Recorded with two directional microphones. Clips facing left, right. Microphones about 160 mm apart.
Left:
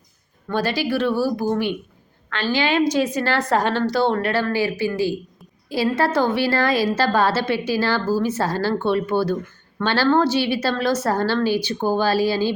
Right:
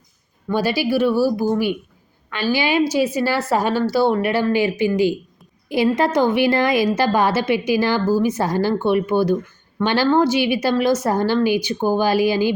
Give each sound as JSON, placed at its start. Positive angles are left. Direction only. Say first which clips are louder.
{"t": 0.4, "sound": "a woman's voice", "louder": "right 3 dB", "side_deg": -10}